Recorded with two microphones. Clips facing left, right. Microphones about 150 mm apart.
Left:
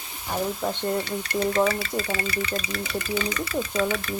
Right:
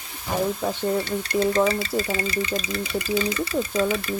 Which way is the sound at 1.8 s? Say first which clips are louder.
Right 3 dB; 30° right (ahead or behind).